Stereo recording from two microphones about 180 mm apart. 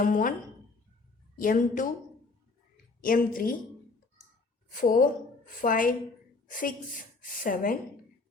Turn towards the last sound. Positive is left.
turn(degrees=50)  # may be behind; listen again after turning